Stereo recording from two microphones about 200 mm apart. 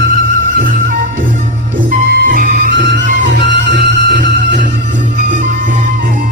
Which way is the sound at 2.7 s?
60° right (ahead or behind).